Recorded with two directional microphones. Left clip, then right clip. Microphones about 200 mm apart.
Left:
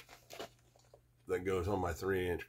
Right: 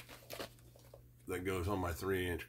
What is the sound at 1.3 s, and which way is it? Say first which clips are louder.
Speech: left 3 dB; 10° left (ahead or behind).